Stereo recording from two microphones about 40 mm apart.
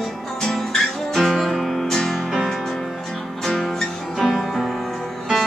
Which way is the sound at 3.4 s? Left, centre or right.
Centre.